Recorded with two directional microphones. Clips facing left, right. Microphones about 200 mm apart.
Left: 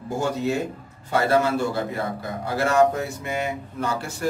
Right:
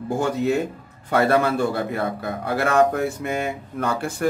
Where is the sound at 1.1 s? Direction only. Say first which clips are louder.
Right 2 dB; 60° right (ahead or behind).